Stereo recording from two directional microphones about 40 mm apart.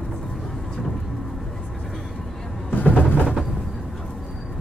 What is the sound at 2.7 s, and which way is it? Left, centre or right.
Music, left.